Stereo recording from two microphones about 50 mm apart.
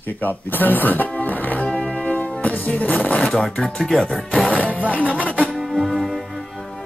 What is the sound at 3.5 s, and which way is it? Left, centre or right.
Speech, centre.